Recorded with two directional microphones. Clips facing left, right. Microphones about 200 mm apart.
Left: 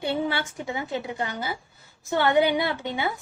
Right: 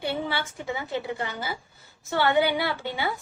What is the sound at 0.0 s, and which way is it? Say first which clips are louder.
A woman's voice: left 3 dB; 20° left (ahead or behind).